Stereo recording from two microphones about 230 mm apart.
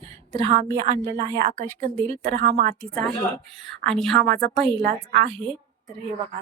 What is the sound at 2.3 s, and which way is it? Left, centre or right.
Speech, right.